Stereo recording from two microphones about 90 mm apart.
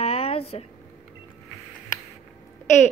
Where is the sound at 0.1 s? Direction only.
90° left.